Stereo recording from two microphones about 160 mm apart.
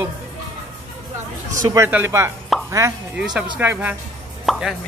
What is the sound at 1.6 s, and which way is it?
Speech, 15° right (ahead or behind).